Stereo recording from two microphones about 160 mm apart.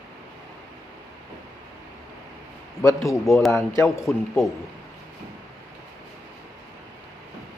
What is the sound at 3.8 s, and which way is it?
Speech, 20° left (ahead or behind).